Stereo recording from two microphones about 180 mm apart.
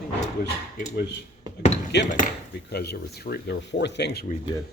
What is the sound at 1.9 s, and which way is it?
Speech, 70° left (ahead or behind).